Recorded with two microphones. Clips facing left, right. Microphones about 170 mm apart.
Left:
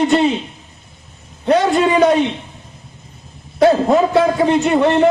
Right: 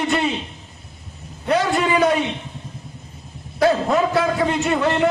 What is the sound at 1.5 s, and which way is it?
Speech, 25° left (ahead or behind).